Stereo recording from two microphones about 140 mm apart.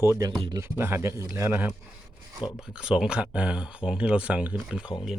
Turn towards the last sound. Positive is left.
turn(degrees=-5)  # may be behind; listen again after turning